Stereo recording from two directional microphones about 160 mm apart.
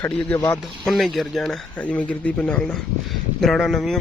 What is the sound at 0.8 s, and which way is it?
Speech, centre (ahead or behind).